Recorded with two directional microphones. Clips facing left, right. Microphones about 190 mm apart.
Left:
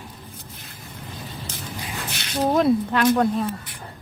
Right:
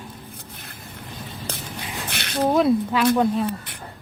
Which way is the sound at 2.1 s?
60° right (ahead or behind).